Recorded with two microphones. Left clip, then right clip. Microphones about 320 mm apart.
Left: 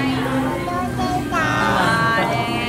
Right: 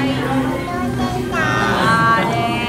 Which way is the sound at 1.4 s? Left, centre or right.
Centre.